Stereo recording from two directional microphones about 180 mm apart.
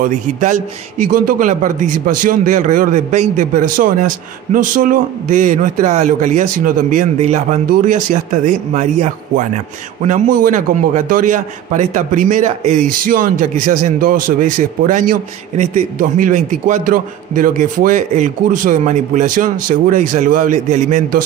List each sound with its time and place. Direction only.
0.0 s a man's voice: 45° right (ahead or behind)